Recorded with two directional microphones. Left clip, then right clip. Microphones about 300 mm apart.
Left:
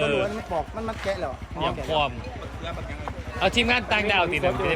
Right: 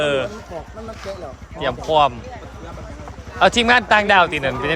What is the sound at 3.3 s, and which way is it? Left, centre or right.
Speech, centre.